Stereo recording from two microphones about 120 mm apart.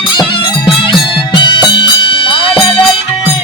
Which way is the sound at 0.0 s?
45° left (ahead or behind).